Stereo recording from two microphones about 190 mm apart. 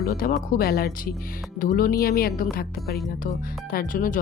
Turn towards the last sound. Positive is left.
turn(degrees=45)  # may be behind; listen again after turning